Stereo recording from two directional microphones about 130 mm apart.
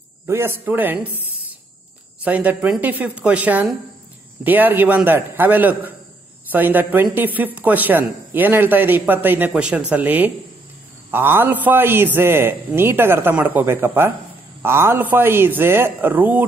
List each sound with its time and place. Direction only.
0.3 s a man's voice: 20° right (ahead or behind)
2.2 s a man's voice: 10° right (ahead or behind)